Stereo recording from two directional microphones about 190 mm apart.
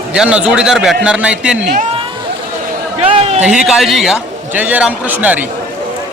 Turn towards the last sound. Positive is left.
turn(degrees=-10)  # may be behind; listen again after turning